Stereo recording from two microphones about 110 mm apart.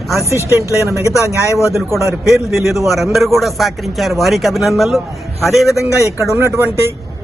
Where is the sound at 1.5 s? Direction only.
25° left (ahead or behind).